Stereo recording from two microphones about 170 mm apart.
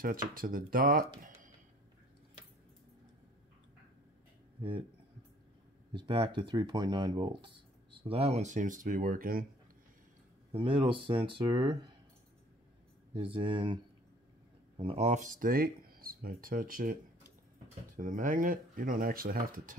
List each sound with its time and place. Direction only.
0.0 s speech: 55° right (ahead or behind)
4.6 s speech: 30° right (ahead or behind)
5.9 s speech: 30° right (ahead or behind); by 9.5 s 55° right (ahead or behind)
10.5 s speech: 35° right (ahead or behind)
13.1 s speech: 30° right (ahead or behind)
14.8 s speech: 35° right (ahead or behind); by 19.8 s 55° right (ahead or behind)